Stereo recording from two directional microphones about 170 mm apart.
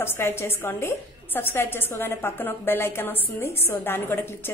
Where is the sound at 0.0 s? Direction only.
15° left (ahead or behind).